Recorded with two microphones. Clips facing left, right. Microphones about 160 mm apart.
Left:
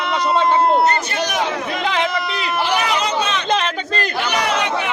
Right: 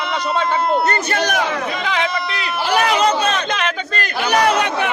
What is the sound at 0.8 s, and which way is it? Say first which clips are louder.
Speech: even; 55° right (ahead or behind).